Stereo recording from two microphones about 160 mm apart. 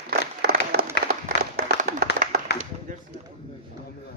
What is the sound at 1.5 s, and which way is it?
Clapping, 70° right (ahead or behind).